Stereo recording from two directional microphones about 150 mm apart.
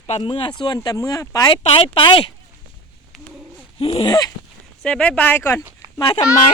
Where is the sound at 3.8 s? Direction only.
40° left (ahead or behind).